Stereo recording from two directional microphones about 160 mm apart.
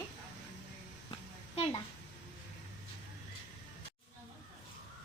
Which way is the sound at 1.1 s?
40° left (ahead or behind).